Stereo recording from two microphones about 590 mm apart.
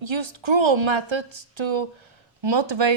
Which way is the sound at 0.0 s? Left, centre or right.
Right.